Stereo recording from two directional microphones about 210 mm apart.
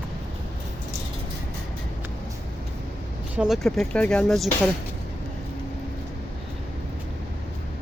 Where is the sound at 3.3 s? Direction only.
5° right (ahead or behind).